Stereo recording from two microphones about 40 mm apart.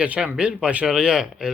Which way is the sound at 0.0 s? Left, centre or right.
Right.